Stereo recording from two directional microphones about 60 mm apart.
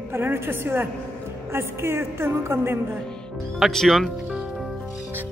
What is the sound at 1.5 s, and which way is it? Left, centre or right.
Music, right.